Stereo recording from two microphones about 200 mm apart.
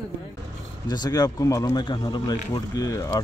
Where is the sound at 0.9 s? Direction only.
20° left (ahead or behind).